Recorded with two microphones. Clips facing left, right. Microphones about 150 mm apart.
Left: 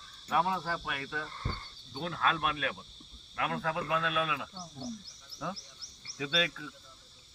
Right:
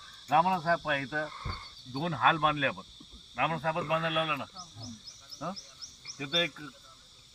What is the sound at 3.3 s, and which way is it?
Speech, 35° right (ahead or behind).